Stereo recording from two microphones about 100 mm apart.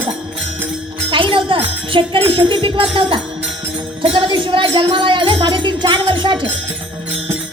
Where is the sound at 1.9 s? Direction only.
60° right (ahead or behind).